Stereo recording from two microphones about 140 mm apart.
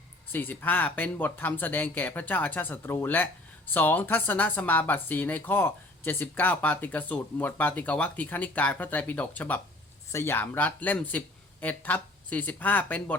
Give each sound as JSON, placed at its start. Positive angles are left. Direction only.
{"t": 0.3, "sound": "speech", "side_deg": 10}